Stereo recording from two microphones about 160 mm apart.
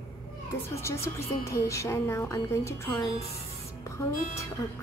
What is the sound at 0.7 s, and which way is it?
Speech, 15° left (ahead or behind).